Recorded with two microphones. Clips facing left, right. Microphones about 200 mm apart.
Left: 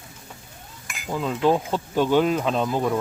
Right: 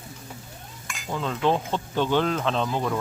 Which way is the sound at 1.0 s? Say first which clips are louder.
Left 3 dB; 10° left (ahead or behind).